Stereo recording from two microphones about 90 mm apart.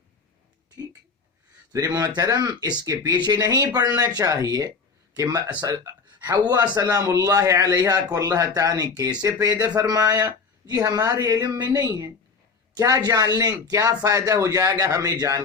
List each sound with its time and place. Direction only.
1.9 s speech: 40° right (ahead or behind)
5.1 s speech: 50° right (ahead or behind)